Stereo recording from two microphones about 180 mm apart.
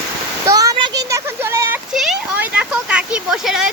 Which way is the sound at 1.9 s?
Centre (ahead or behind).